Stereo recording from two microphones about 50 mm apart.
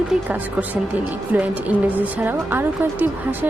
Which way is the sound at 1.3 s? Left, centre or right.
Right.